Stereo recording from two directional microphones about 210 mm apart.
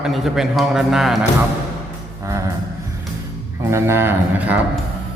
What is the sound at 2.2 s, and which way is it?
Music, 15° right (ahead or behind).